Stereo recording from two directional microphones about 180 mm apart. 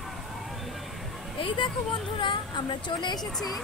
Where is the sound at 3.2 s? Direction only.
Centre (ahead or behind).